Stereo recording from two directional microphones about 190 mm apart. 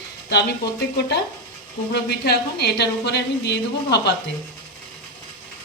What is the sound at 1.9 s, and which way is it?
Speech, 60° left (ahead or behind).